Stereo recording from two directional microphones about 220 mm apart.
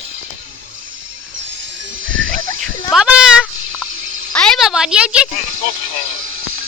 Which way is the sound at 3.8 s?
65° right (ahead or behind).